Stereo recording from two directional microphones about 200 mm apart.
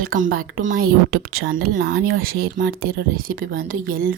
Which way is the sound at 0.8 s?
90° right.